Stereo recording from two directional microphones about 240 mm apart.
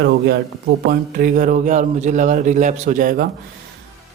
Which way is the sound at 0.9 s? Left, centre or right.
Right.